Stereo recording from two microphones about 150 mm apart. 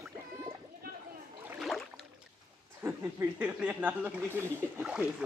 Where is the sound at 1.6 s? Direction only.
Centre (ahead or behind).